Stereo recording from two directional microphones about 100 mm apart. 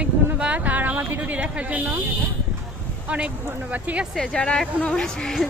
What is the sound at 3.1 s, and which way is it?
Speech, 15° right (ahead or behind).